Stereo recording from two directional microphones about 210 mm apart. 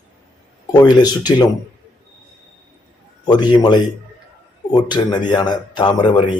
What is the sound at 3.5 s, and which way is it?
Speech, 20° left (ahead or behind).